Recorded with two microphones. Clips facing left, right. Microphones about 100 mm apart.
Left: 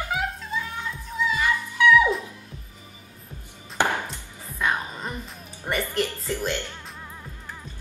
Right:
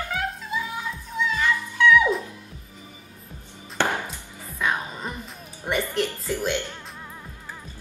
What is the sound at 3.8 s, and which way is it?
Chopping, 15° left (ahead or behind).